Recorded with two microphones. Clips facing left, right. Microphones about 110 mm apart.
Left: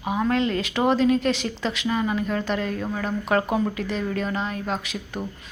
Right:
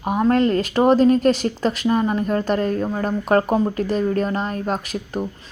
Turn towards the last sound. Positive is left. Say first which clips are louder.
# right 5 dB
turn(degrees=-45)  # may be behind; listen again after turning